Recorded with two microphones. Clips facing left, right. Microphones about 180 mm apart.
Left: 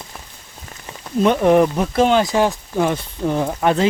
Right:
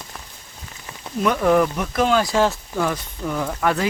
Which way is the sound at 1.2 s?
25° left (ahead or behind).